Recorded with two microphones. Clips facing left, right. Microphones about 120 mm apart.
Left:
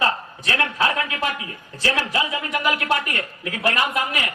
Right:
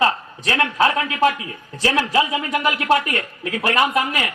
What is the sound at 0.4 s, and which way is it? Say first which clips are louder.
A man's voice: right 4 dB; 30° right (ahead or behind).